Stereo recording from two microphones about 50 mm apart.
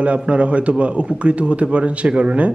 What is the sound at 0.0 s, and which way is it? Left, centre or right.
Speech, right.